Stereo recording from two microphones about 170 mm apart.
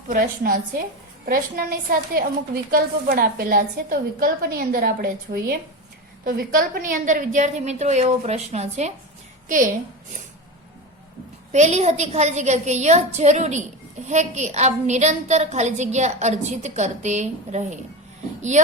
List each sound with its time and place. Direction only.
0.1 s a woman's voice: 55° right (ahead or behind)
11.5 s a woman's voice: 40° right (ahead or behind)